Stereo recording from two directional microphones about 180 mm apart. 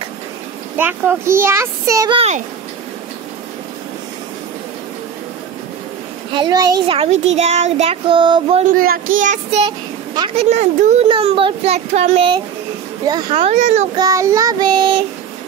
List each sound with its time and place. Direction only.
0.7 s speech: 10° right (ahead or behind)
2.1 s child singing: 40° right (ahead or behind)
6.3 s child singing: 25° right (ahead or behind)
7.0 s child singing: 40° right (ahead or behind)
8.7 s a child's voice: 55° right (ahead or behind)
9.1 s child singing: 45° right (ahead or behind)
9.7 s a woman's voice: 25° right (ahead or behind)
10.4 s child singing: 40° right (ahead or behind)
11.1 s child singing: 30° right (ahead or behind)
13.9 s child singing: 20° right (ahead or behind)